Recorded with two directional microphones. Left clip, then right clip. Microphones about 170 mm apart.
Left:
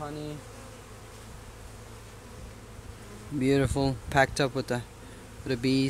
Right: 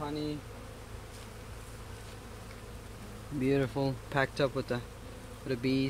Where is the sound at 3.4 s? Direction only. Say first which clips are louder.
Left 4 dB; 50° left (ahead or behind).